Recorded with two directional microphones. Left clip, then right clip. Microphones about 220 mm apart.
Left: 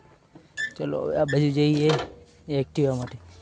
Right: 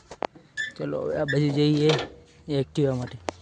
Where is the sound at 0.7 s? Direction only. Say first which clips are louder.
Left 3 dB; 5° left (ahead or behind).